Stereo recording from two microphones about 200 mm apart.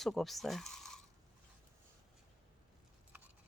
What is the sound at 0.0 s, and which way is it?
Speech, centre (ahead or behind).